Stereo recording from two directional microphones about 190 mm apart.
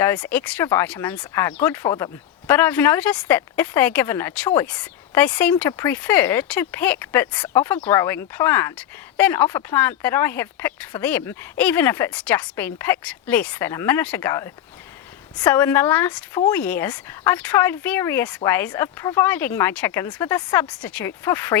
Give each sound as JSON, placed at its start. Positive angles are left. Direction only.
{"t": 0.0, "sound": "speech", "side_deg": 10}